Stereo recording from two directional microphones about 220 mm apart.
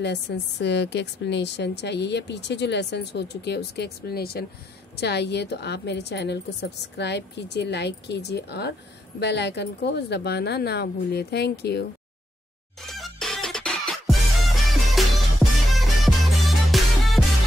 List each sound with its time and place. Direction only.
0.0 s a woman's voice: 50° left (ahead or behind)
12.9 s music: centre (ahead or behind)